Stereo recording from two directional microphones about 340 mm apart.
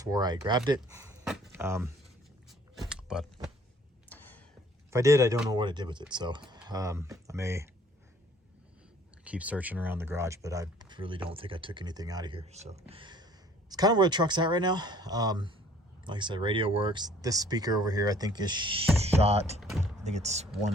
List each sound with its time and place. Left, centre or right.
0.0 s speech: centre
2.9 s a sound: centre
4.9 s speech: centre
9.2 s speech: centre